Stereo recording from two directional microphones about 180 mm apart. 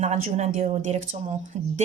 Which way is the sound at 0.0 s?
35° right (ahead or behind).